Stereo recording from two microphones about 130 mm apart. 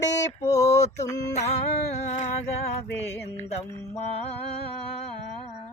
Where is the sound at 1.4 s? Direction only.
60° left (ahead or behind).